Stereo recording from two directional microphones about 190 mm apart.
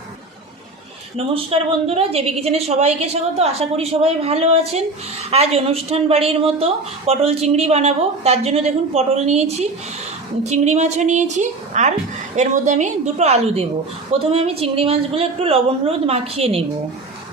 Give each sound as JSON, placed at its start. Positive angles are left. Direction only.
{"t": 1.1, "sound": "a woman's voice", "side_deg": -30}